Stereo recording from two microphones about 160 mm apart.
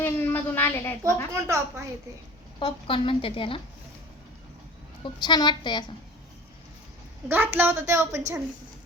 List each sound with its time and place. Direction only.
0.0 s a sound: 10° left (ahead or behind)
1.3 s a woman's voice: 20° right (ahead or behind)
2.6 s a woman's voice: 35° left (ahead or behind)
5.0 s a woman's voice: 25° left (ahead or behind)
7.3 s a woman's voice: 10° right (ahead or behind)